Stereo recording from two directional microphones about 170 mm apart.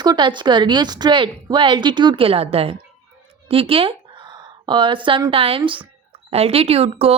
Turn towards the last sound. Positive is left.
turn(degrees=-35)  # may be behind; listen again after turning